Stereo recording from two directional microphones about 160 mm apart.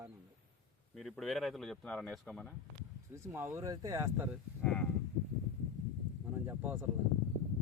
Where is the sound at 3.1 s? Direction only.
15° right (ahead or behind).